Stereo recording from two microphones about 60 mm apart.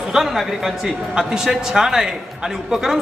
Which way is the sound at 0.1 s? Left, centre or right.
Centre.